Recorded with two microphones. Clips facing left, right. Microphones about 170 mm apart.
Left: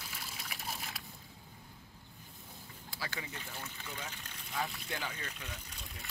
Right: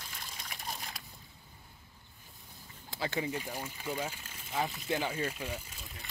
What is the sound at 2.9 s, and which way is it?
Speech, 25° right (ahead or behind).